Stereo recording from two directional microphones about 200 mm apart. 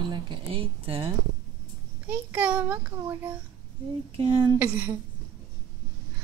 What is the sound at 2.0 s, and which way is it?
A child's voice, 10° right (ahead or behind).